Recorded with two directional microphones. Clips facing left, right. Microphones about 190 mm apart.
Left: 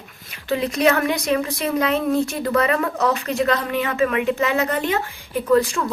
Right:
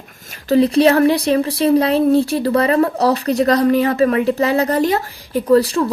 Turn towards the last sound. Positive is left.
turn(degrees=-35)  # may be behind; listen again after turning